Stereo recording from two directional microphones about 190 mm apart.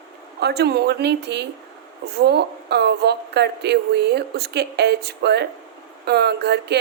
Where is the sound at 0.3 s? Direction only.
60° right (ahead or behind).